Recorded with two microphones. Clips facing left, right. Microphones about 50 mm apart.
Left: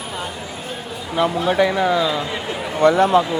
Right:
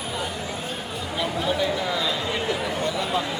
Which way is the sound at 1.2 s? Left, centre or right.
Left.